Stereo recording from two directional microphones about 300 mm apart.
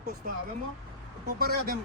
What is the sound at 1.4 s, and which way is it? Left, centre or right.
Speech, right.